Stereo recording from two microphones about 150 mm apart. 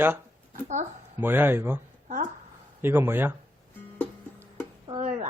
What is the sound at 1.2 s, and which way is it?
Speech, 15° right (ahead or behind).